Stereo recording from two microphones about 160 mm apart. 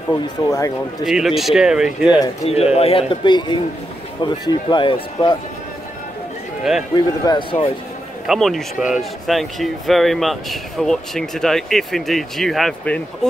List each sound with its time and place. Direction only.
0.1 s speech: 20° left (ahead or behind)
1.0 s speech: centre (ahead or behind)
2.4 s a man's voice: 40° left (ahead or behind)
6.7 s speech: 5° right (ahead or behind)
8.3 s speech: centre (ahead or behind)